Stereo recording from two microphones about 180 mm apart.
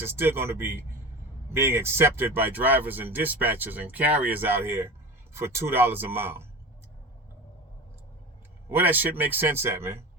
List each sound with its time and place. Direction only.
0.0 s speech: 10° right (ahead or behind)
8.7 s speech: 10° right (ahead or behind)